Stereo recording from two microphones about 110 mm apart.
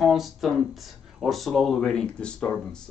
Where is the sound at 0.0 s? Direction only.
Centre (ahead or behind).